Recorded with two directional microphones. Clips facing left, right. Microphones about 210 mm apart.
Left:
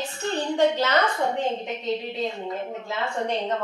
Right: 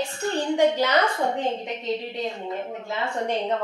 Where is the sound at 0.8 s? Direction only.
10° right (ahead or behind).